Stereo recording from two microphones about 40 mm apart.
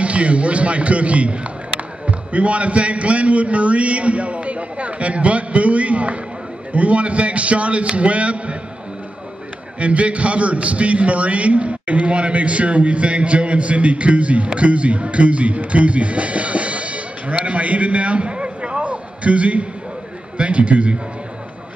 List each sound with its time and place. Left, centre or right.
0.0 s a man's voice: right
9.8 s a man's voice: right